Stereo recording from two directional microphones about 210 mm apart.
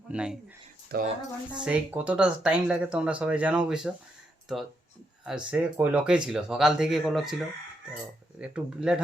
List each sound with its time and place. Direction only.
0.1 s speech: 5° right (ahead or behind)
0.9 s speech: 50° right (ahead or behind)
1.5 s speech: 5° right (ahead or behind)
5.2 s speech: 5° right (ahead or behind)